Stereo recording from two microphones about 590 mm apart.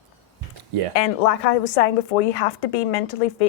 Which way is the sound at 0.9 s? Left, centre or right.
Left.